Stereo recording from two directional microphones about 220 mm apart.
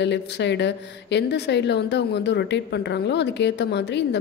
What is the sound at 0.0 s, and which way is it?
A woman's voice, 50° left (ahead or behind).